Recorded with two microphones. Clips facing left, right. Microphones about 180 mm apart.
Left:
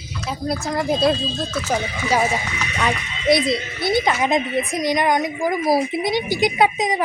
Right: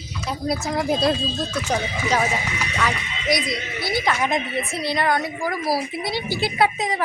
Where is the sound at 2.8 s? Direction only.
25° left (ahead or behind).